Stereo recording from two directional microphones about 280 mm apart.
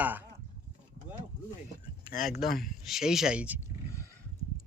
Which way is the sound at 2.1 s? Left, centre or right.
Left.